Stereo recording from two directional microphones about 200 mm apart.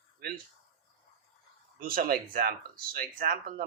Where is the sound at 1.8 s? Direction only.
45° right (ahead or behind).